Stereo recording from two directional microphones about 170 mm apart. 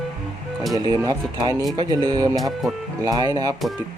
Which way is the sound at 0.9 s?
25° right (ahead or behind).